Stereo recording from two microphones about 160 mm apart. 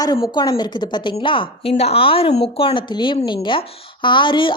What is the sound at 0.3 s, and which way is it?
A woman's voice, 25° left (ahead or behind).